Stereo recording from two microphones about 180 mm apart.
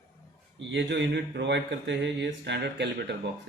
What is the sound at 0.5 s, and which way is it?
Speech, 75° right (ahead or behind).